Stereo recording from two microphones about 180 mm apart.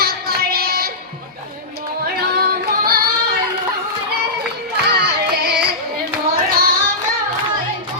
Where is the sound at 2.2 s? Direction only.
60° right (ahead or behind).